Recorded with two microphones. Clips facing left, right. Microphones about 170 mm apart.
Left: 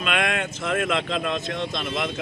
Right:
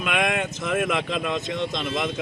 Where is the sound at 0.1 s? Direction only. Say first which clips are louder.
Right 1 dB; 15° right (ahead or behind).